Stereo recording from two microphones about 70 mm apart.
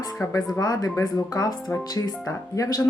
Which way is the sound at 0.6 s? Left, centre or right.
Left.